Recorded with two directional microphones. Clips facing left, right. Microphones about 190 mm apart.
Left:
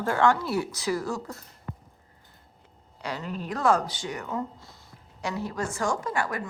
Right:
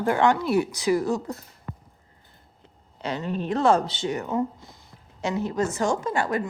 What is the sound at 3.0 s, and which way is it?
A woman's voice, 25° right (ahead or behind).